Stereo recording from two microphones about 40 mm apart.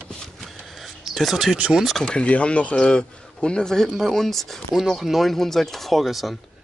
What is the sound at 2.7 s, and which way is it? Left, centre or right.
Speech, left.